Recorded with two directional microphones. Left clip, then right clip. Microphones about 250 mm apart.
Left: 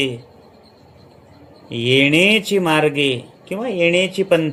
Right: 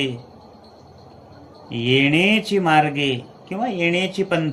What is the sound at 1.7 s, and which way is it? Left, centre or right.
Speech, left.